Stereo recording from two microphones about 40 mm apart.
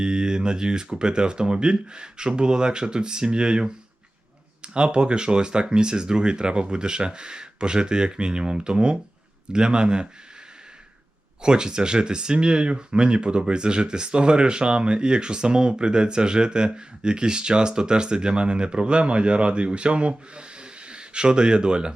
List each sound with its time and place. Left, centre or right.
0.0 s speech: centre
11.4 s speech: right